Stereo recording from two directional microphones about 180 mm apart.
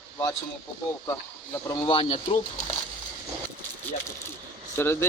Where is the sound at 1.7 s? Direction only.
25° left (ahead or behind).